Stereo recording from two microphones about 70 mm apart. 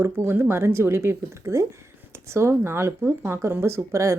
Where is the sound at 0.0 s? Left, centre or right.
Right.